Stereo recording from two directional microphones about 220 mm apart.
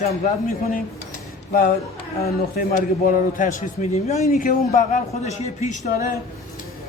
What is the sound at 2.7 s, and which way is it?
A man's voice, 35° left (ahead or behind).